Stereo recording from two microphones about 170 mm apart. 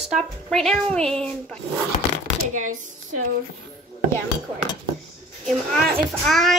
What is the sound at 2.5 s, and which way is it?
Speech, 50° right (ahead or behind).